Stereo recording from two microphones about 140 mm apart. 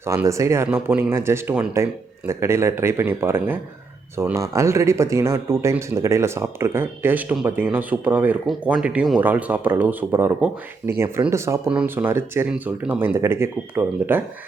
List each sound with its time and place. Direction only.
0.1 s speech: 20° right (ahead or behind)